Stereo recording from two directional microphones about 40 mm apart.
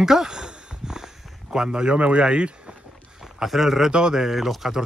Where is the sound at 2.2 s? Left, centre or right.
Right.